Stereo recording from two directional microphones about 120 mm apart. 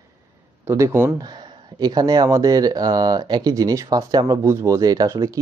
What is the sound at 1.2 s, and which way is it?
Speech, 35° right (ahead or behind).